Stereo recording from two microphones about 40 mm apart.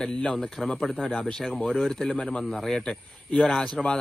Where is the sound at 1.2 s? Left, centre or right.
Left.